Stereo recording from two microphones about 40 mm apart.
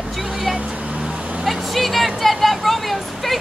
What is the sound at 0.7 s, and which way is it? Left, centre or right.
Vehicle, right.